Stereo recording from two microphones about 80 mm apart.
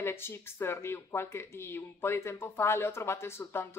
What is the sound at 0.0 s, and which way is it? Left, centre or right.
Speech, left.